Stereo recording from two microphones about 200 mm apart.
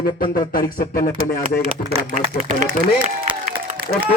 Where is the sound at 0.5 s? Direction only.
45° left (ahead or behind).